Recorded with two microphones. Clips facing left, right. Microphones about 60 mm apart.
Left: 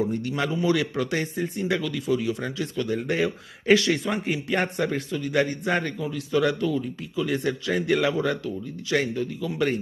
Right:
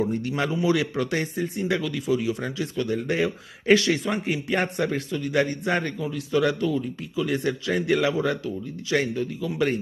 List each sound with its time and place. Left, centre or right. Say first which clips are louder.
0.0 s a man's voice: right 1 dB; centre
0.6 s speech: even; centre